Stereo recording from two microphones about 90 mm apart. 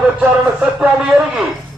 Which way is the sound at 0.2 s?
10° right (ahead or behind).